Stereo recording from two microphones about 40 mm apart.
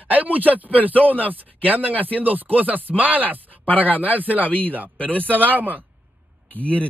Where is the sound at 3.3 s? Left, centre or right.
Right.